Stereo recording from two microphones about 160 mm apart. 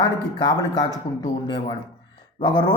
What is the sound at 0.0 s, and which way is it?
Speech, 25° left (ahead or behind).